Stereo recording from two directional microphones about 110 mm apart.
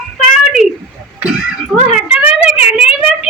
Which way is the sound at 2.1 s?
10° right (ahead or behind).